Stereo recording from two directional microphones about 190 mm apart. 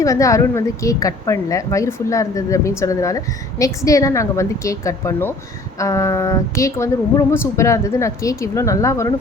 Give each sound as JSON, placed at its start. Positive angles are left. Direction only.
{"t": 0.0, "sound": "a woman's voice", "side_deg": 15}